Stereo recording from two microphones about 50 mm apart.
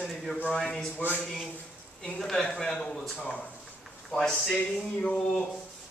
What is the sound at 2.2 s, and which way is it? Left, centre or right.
Speech, centre.